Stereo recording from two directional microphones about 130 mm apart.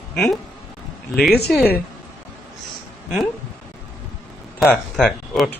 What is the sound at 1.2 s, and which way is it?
Speech, centre (ahead or behind).